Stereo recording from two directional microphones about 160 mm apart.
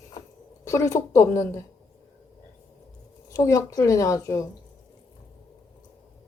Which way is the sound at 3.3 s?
20° left (ahead or behind).